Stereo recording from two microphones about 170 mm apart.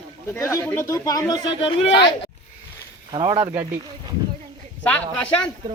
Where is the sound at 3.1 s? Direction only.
30° right (ahead or behind).